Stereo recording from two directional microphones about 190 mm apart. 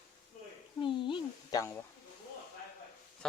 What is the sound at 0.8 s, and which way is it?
Speech, 25° left (ahead or behind).